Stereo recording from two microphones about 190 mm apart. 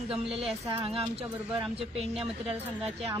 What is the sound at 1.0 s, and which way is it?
A woman's voice, 30° right (ahead or behind).